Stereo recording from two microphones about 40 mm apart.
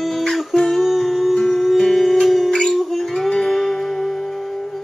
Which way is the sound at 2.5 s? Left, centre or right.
Left.